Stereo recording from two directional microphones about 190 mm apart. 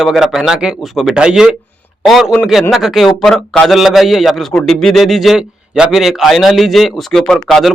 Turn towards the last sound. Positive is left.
turn(degrees=0)  # may be behind; listen again after turning